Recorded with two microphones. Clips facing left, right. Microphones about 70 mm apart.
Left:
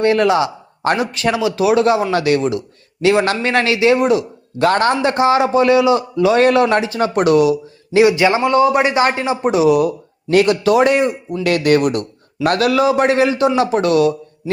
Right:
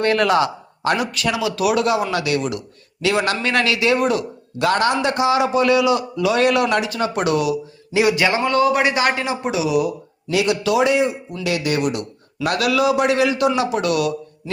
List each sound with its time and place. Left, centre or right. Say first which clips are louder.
0.0 s a man's voice: left 3 dB; left
4.5 s a man's voice: left 3 dB; left
8.0 s a man's voice: left 4 dB; left
9.4 s a man's voice: left 9 dB; left